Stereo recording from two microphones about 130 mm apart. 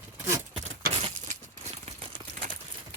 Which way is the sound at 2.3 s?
90° right.